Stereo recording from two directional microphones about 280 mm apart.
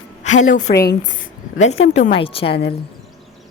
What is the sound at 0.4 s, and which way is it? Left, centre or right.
A woman's voice, left.